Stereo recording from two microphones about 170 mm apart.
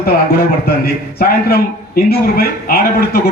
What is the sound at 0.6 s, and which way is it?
A man's voice, 65° left (ahead or behind).